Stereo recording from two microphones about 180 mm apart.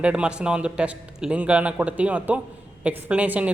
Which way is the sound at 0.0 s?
5° right (ahead or behind).